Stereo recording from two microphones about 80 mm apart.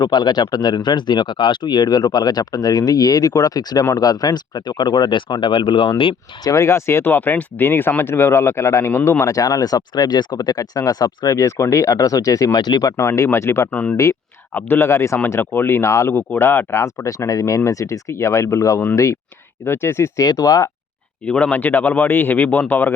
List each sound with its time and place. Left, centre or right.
0.0 s speech: left
6.5 s speech: left
9.2 s speech: left
11.3 s speech: left
12.5 s speech: left
13.0 s speech: left
13.7 s speech: left
13.9 s speech: left
14.5 s speech: left
16.1 s speech: left
16.8 s speech: left
19.6 s speech: left
20.2 s speech: left
21.2 s speech: centre